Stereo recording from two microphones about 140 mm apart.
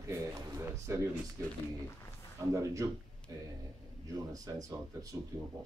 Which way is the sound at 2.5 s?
25° right (ahead or behind).